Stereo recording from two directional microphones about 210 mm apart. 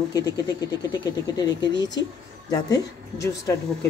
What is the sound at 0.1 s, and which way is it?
Speech, 20° left (ahead or behind).